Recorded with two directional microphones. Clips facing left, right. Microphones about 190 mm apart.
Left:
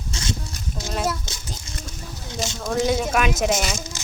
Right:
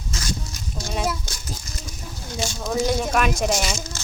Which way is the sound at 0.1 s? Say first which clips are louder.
Left 1 dB; 25° left (ahead or behind).